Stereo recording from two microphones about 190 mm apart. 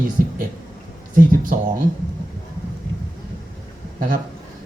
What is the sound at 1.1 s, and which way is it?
Speech, 45° right (ahead or behind).